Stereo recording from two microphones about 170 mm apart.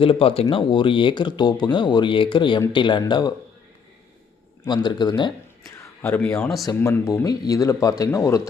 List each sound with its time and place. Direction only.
0.0 s speech: 30° left (ahead or behind)
4.6 s speech: 25° left (ahead or behind)
6.0 s speech: 10° left (ahead or behind)